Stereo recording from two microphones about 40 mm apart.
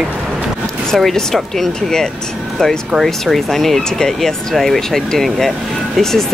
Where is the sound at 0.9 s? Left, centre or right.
Centre.